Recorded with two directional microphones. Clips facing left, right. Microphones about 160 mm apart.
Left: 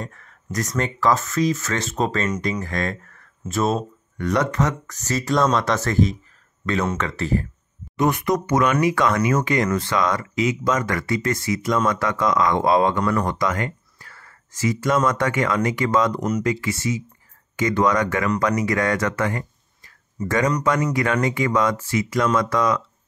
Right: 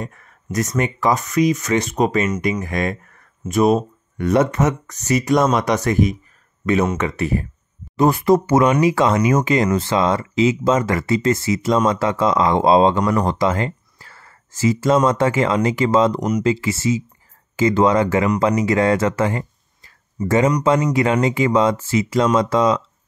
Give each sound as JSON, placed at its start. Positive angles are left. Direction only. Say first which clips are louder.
{"t": 0.0, "sound": "speech", "louder": "right 3 dB", "side_deg": -15}
{"t": 8.0, "sound": "speech", "louder": "right 6 dB", "side_deg": -30}